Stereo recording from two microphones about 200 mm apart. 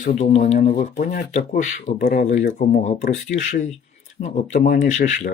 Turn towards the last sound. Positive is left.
turn(degrees=35)  # may be behind; listen again after turning